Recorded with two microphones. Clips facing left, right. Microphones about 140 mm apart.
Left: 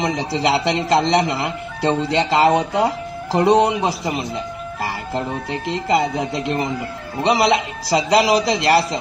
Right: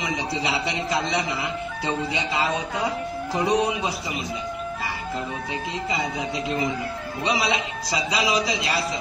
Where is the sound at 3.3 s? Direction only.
80° left.